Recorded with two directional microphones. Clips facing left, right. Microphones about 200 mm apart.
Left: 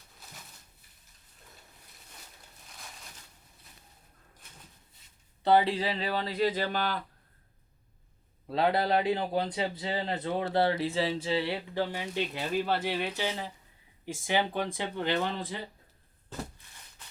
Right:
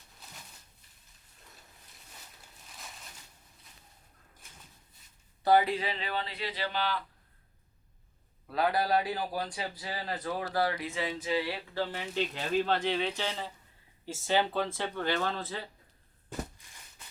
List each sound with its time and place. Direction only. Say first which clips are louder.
5.4 s speech: left 1 dB; 25° left (ahead or behind); by 7.0 s 45° left (ahead or behind)
8.4 s a man's voice: left 2 dB; 25° left (ahead or behind)
11.8 s speech: even; 15° left (ahead or behind)